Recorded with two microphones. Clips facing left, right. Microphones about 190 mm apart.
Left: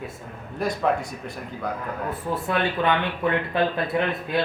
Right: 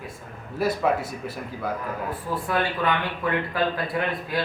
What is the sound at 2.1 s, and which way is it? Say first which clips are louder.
Speech: left 2 dB; 25° left (ahead or behind).